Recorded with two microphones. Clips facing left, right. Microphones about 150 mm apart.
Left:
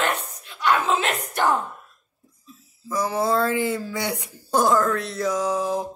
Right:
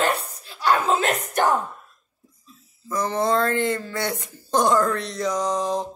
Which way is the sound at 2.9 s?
10° left (ahead or behind).